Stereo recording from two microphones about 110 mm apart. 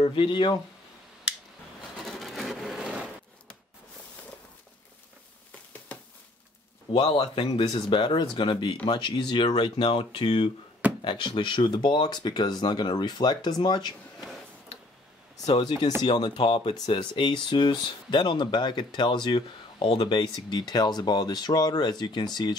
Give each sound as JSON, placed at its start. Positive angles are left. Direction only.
{"t": 0.0, "sound": "speech", "side_deg": 50}
{"t": 2.0, "sound": "a sound", "side_deg": 0}
{"t": 6.9, "sound": "speech", "side_deg": 50}
{"t": 15.6, "sound": "speech", "side_deg": 40}